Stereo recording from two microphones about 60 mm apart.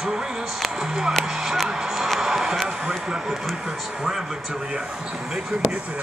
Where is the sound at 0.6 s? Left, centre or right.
Centre.